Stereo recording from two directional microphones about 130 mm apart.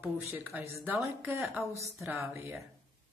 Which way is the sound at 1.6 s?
20° right (ahead or behind).